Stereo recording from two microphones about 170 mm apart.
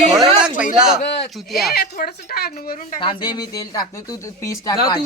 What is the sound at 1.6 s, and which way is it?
Speech, 65° left (ahead or behind).